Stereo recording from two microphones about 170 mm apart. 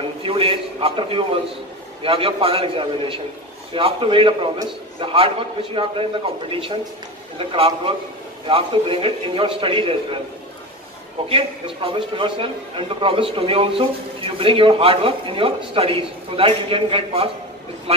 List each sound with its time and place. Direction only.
0.2 s a man's voice: 30° right (ahead or behind)
11.2 s a man's voice: 30° right (ahead or behind)